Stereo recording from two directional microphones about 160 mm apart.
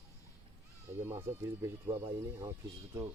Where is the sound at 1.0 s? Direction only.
15° right (ahead or behind).